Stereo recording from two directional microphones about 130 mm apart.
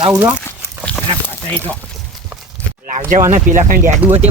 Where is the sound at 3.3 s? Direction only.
90° right.